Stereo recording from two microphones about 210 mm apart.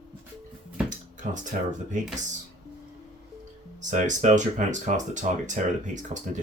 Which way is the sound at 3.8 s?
35° right (ahead or behind).